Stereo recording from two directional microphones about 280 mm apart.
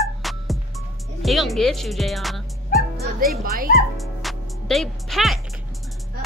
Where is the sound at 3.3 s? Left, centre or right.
Right.